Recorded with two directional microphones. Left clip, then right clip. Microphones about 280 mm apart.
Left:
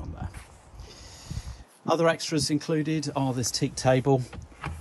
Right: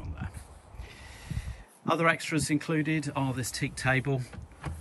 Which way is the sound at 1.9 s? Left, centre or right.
Centre.